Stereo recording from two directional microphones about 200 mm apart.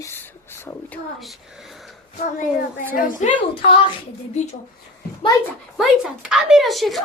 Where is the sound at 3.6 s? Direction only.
25° left (ahead or behind).